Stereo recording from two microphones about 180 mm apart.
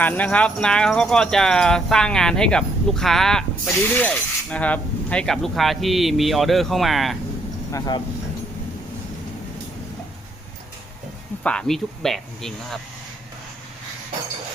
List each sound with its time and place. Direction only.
0.0 s speech: 5° left (ahead or behind)
7.7 s speech: 20° left (ahead or behind)
11.4 s speech: 5° left (ahead or behind)